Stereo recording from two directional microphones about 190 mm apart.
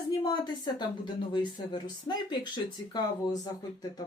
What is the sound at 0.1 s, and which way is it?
Speech, 20° left (ahead or behind).